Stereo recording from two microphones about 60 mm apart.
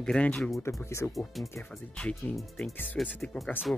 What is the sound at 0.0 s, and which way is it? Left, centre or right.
Speech, centre.